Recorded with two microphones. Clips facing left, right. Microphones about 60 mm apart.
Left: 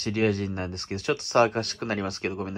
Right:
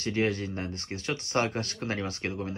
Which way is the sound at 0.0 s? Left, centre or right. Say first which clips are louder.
Left 3 dB; left.